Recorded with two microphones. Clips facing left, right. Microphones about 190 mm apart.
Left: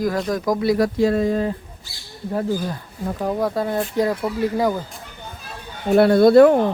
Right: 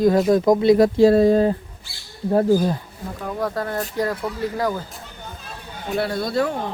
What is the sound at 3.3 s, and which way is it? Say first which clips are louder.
Speech: left 1 dB; 10° left (ahead or behind).